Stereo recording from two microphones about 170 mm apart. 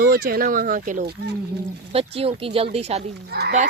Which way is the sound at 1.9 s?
35° right (ahead or behind).